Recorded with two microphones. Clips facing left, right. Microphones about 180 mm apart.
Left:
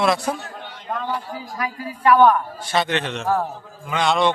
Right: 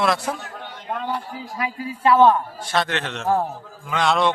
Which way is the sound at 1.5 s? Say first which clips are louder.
Right 2 dB; 25° right (ahead or behind).